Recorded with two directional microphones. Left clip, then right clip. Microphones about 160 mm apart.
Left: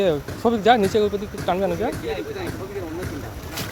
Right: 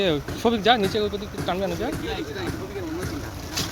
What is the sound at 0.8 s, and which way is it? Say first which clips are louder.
Speech: left 4 dB; 25° left (ahead or behind).